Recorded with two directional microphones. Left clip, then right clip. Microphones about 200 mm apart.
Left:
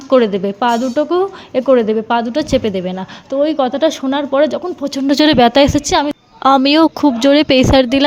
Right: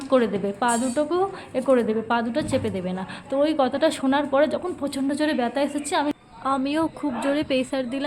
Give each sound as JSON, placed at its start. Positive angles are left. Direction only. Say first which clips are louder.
{"t": 0.1, "sound": "speech", "louder": "left 9 dB", "side_deg": 35}